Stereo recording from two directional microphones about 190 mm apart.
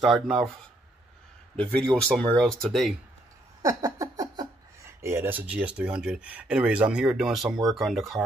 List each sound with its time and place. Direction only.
1.6 s speech: 5° left (ahead or behind)
3.6 s speech: 20° right (ahead or behind); by 7.5 s centre (ahead or behind)
7.5 s speech: 20° right (ahead or behind)
7.8 s speech: centre (ahead or behind)